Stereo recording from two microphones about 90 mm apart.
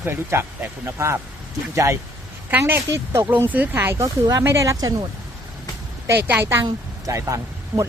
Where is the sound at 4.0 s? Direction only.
40° right (ahead or behind).